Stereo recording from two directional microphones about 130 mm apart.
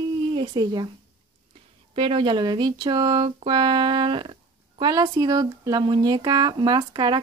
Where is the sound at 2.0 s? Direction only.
40° right (ahead or behind).